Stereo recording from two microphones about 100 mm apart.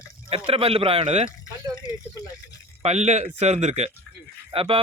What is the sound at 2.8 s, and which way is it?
A man's voice, 90° right.